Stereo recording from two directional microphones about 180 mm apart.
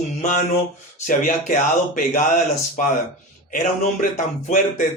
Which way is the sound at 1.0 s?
45° left (ahead or behind).